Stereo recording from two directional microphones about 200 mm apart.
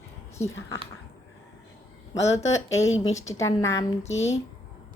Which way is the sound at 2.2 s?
70° left (ahead or behind).